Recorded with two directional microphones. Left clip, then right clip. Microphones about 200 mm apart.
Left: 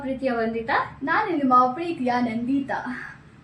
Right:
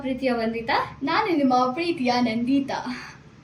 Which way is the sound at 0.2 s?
5° left (ahead or behind).